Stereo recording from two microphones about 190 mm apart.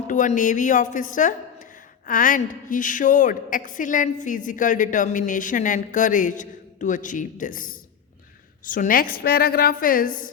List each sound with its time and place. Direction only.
0.1 s a woman's voice: 40° left (ahead or behind)